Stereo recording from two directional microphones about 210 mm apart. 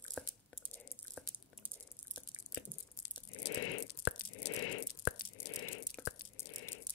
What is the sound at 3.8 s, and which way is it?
Tearing, 50° left (ahead or behind).